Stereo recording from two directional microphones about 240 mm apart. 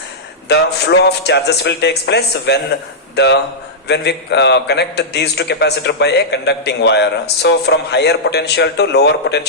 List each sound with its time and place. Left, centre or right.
0.4 s a man's voice: left
3.8 s a man's voice: left